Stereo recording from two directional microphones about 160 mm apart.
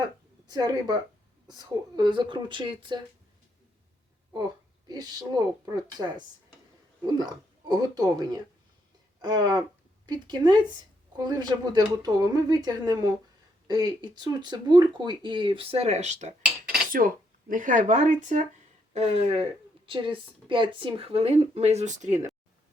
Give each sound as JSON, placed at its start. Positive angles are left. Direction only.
{"t": 0.5, "sound": "speech", "side_deg": -25}
{"t": 4.9, "sound": "speech", "side_deg": -25}
{"t": 9.2, "sound": "speech", "side_deg": -25}
{"t": 16.4, "sound": "cutlery", "side_deg": -5}
{"t": 17.5, "sound": "speech", "side_deg": -55}